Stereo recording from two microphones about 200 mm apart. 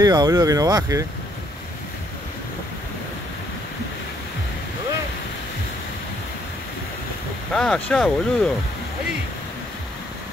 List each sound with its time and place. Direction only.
0.0 s speech: 20° right (ahead or behind)
7.5 s speech: 5° left (ahead or behind)